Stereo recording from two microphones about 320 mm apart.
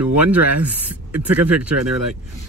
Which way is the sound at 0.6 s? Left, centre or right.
Right.